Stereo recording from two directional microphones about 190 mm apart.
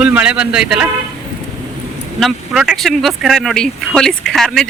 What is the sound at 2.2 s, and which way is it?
Speech, centre (ahead or behind).